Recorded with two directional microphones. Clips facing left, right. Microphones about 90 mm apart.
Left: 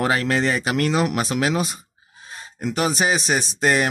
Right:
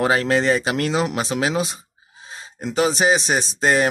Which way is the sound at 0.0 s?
30° right (ahead or behind).